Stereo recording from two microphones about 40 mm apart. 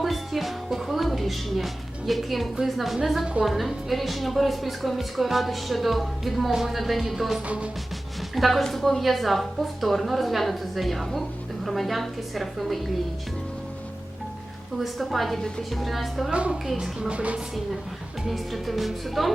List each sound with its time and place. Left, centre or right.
0.0 s music: centre
0.9 s a woman's voice: centre
7.4 s music: right
8.4 s a woman's voice: centre
14.8 s a woman's voice: centre
15.4 s a woman's voice: centre
15.7 s a woman's voice: centre
16.3 s a woman's voice: right
17.2 s music: right
18.3 s a woman's voice: centre